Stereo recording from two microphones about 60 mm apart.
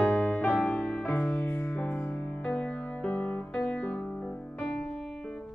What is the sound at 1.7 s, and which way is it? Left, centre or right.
Music, centre.